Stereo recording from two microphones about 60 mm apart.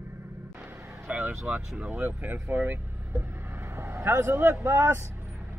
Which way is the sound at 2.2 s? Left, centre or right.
Right.